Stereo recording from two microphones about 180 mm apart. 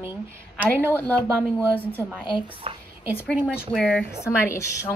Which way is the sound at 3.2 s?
5° left (ahead or behind).